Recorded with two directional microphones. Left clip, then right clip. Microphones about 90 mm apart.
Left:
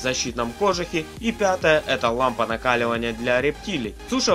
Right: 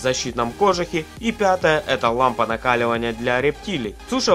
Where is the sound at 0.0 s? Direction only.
35° right (ahead or behind).